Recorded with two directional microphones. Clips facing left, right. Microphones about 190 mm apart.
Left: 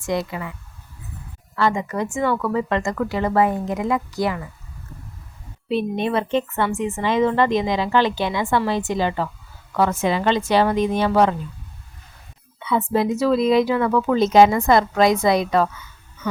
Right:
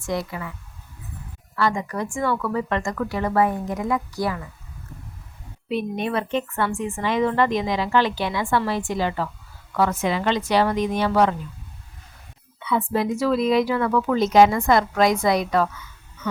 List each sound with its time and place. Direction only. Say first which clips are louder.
0.0 s speech: left 3 dB; 20° left (ahead or behind)
1.5 s speech: left 2 dB; 25° left (ahead or behind)
5.6 s speech: left 3 dB; 30° left (ahead or behind)
12.5 s speech: left 3 dB; 25° left (ahead or behind)